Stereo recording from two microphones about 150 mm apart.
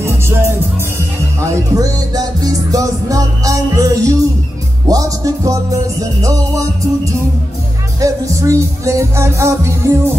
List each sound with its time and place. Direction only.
0.0 s music: 15° right (ahead or behind)